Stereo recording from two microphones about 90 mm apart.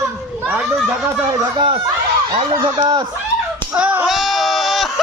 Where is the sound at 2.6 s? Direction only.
55° right (ahead or behind).